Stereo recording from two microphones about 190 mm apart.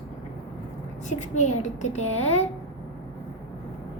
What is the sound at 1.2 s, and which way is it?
A child's voice, 40° left (ahead or behind).